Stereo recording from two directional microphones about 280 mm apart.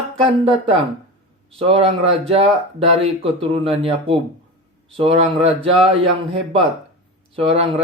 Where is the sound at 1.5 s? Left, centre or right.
Right.